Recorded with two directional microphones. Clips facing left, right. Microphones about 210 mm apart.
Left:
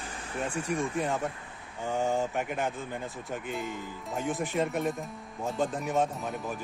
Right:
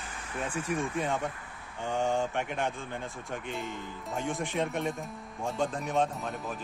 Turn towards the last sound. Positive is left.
turn(degrees=0)  # may be behind; listen again after turning